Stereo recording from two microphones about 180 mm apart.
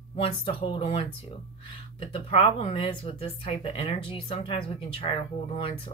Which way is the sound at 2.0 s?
35° left (ahead or behind).